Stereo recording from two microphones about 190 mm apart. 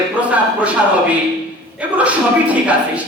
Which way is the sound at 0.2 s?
5° right (ahead or behind).